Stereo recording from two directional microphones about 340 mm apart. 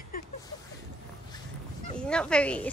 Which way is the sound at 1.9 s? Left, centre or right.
Centre.